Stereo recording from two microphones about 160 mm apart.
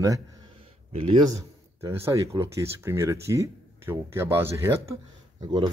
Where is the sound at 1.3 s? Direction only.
15° right (ahead or behind).